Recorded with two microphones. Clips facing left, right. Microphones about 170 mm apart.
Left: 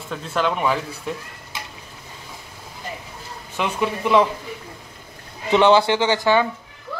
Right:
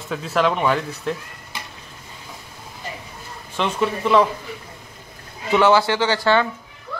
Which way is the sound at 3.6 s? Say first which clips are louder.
Right 1 dB; 10° left (ahead or behind).